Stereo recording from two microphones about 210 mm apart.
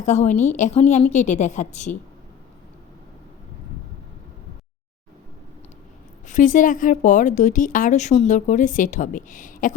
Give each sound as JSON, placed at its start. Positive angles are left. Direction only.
{"t": 0.0, "sound": "a woman's voice", "side_deg": 35}
{"t": 6.2, "sound": "a woman's voice", "side_deg": 35}